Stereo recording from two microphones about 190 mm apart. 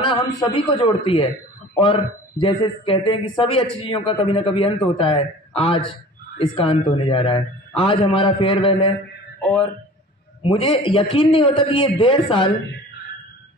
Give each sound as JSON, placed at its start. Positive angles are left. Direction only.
{"t": 0.0, "sound": "a man's voice", "side_deg": 25}
{"t": 9.4, "sound": "speech", "side_deg": 5}
{"t": 10.4, "sound": "speech", "side_deg": 25}